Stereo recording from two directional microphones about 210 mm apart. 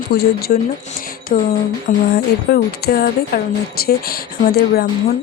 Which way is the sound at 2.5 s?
50° left (ahead or behind).